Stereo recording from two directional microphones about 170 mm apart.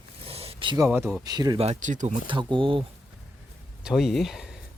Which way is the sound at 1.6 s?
45° right (ahead or behind).